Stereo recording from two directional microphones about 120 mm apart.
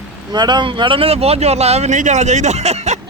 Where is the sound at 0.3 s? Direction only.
35° right (ahead or behind); by 3.0 s 65° right (ahead or behind).